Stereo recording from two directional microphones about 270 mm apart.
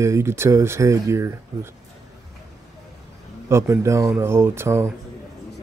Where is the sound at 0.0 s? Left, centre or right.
Centre.